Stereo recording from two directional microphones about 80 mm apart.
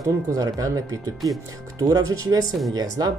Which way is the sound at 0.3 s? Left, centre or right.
Right.